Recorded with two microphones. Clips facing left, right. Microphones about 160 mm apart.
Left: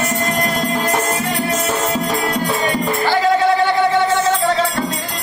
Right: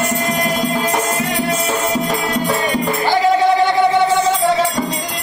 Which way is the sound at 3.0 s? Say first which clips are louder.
Right 1 dB; 15° right (ahead or behind).